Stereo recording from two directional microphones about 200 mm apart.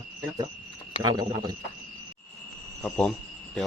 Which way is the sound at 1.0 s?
20° right (ahead or behind).